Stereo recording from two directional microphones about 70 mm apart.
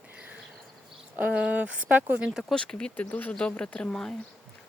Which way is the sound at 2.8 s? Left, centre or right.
Left.